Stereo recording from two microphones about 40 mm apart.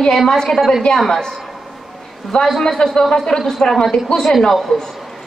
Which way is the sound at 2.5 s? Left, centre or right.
Centre.